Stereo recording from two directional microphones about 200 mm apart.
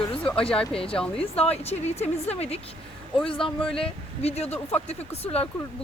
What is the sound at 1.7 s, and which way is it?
Speech, 30° left (ahead or behind).